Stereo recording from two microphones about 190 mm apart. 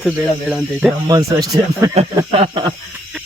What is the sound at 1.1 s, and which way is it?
Speech, 20° right (ahead or behind).